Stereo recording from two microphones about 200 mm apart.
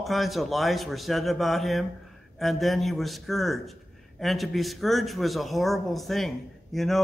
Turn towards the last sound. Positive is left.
turn(degrees=0)  # may be behind; listen again after turning